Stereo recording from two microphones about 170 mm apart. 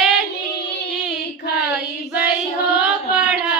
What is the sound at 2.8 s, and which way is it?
Carnatic music, 5° right (ahead or behind).